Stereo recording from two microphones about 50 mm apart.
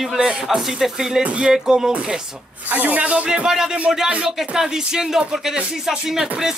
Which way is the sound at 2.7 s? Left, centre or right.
Right.